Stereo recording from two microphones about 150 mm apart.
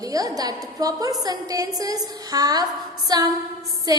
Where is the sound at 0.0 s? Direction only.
25° right (ahead or behind).